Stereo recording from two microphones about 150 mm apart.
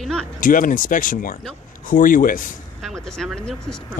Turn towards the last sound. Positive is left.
turn(degrees=5)  # may be behind; listen again after turning